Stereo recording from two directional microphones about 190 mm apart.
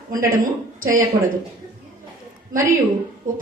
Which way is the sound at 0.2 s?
45° right (ahead or behind).